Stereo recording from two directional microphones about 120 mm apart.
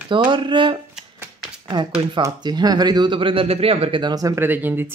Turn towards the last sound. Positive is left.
turn(degrees=-15)  # may be behind; listen again after turning